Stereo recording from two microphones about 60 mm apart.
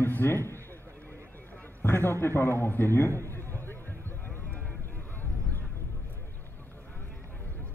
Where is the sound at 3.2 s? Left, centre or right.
Left.